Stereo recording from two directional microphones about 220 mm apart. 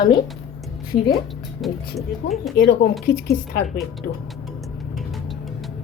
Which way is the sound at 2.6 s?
45° left (ahead or behind).